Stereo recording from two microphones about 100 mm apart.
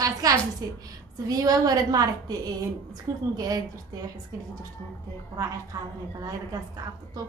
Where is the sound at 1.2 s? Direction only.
40° right (ahead or behind).